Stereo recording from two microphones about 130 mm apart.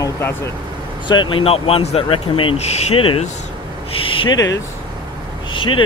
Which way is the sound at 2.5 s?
55° left (ahead or behind).